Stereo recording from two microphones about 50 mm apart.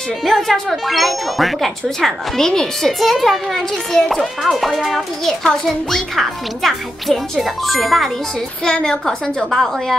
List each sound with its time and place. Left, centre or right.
0.2 s speech: centre
5.4 s speech: centre
8.6 s a woman's voice: centre
9.5 s speech: centre